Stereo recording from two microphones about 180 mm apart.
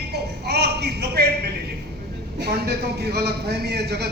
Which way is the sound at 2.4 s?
65° right (ahead or behind).